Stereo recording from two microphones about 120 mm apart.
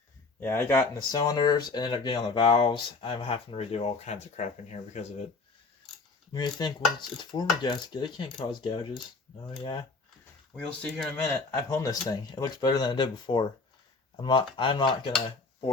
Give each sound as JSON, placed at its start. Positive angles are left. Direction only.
{"t": 0.3, "sound": "speech", "side_deg": 20}
{"t": 0.9, "sound": "speech", "side_deg": 35}
{"t": 6.3, "sound": "mechanisms", "side_deg": 35}
{"t": 10.5, "sound": "speech", "side_deg": 10}
{"t": 11.5, "sound": "mechanisms", "side_deg": 25}